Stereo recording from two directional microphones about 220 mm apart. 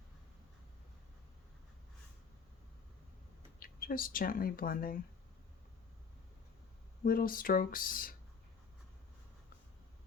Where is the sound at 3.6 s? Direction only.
40° left (ahead or behind).